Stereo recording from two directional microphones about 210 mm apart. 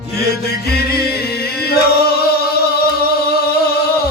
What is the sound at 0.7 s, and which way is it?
Music, 50° left (ahead or behind).